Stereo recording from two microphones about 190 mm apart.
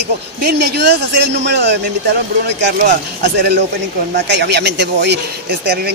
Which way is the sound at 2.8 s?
60° right (ahead or behind).